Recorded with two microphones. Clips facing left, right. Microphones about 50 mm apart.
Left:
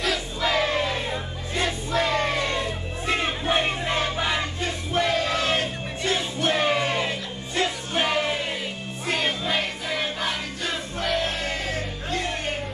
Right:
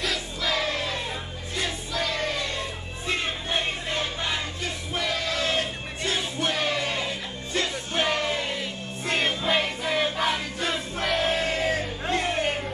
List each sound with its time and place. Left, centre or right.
0.4 s music: left
1.6 s music: left
4.9 s crowd: left
6.0 s music: left
9.0 s music: centre